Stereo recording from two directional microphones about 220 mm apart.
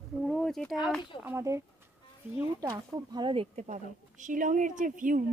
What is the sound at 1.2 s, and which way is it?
Speech, 10° right (ahead or behind).